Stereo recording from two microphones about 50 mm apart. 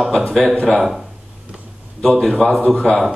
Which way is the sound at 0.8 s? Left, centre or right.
Centre.